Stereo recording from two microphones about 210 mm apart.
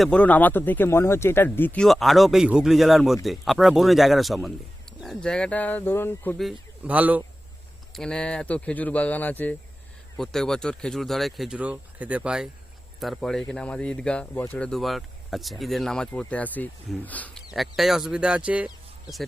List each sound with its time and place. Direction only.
0.0 s speech: 5° left (ahead or behind)
7.9 s speech: 5° left (ahead or behind)